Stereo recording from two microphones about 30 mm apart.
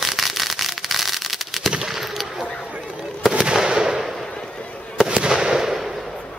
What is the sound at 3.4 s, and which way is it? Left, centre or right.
Fireworks, right.